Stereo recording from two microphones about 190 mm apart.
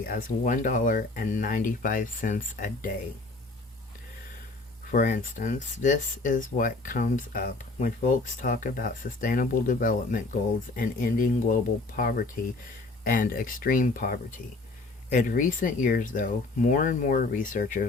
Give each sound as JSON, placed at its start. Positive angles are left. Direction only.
{"t": 0.0, "sound": "speech", "side_deg": 45}
{"t": 4.9, "sound": "speech", "side_deg": 45}